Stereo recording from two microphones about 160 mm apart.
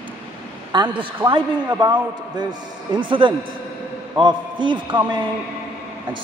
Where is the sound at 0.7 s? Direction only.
30° right (ahead or behind).